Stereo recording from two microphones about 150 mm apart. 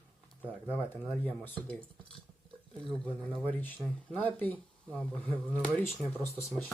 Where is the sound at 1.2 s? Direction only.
10° left (ahead or behind).